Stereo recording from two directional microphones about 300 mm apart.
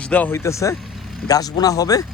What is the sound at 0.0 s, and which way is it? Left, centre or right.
Speech, centre.